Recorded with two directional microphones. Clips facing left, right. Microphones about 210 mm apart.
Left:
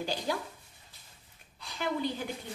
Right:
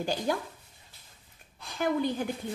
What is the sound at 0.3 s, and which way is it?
Speech, 50° right (ahead or behind).